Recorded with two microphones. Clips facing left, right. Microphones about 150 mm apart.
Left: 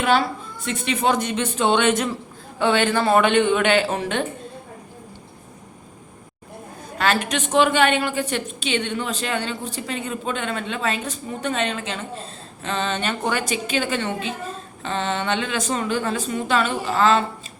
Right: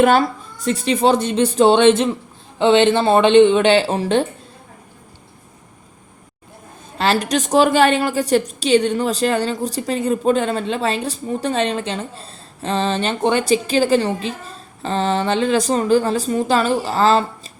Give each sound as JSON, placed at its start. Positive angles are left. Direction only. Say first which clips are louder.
{"t": 0.0, "sound": "a woman's voice", "louder": "right 6 dB", "side_deg": -45}
{"t": 7.0, "sound": "a woman's voice", "louder": "right 4 dB", "side_deg": -35}